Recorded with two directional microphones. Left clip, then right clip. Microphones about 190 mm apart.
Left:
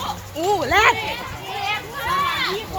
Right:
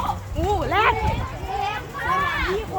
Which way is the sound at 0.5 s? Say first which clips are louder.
Left 4 dB; 70° left (ahead or behind).